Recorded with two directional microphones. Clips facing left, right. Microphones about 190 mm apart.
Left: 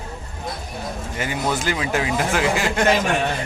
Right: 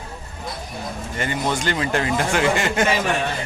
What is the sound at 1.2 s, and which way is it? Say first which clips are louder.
Speech: even; 5° left (ahead or behind).